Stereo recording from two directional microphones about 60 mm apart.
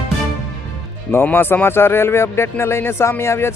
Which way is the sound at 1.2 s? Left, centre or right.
Left.